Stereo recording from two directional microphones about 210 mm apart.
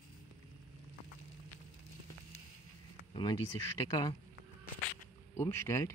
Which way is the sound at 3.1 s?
20° left (ahead or behind).